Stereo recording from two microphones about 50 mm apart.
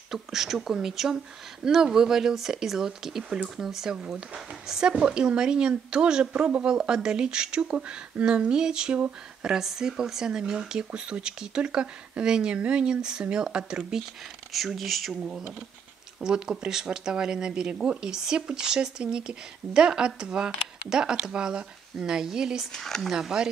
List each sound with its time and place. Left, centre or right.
0.1 s speech: centre
9.4 s speech: centre
14.5 s speech: centre
16.2 s speech: centre
22.7 s speech: centre
23.1 s speech: centre